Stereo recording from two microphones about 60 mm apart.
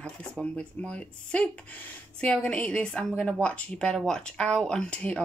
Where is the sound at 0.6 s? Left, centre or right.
Centre.